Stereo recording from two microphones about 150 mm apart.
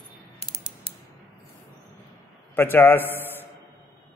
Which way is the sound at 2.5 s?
15° left (ahead or behind).